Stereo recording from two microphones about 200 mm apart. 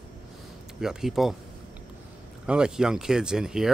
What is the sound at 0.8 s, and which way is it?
Speech, centre (ahead or behind).